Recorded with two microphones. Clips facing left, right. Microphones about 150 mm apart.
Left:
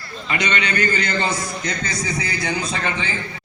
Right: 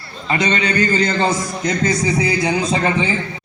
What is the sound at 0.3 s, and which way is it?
A man's voice, 35° right (ahead or behind).